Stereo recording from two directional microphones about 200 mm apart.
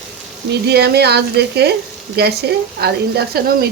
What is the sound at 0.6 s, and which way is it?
Speech, 55° right (ahead or behind).